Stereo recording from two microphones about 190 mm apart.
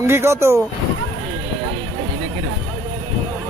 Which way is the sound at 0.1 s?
15° right (ahead or behind).